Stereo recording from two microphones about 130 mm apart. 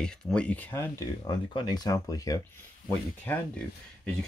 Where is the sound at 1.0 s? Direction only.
35° left (ahead or behind).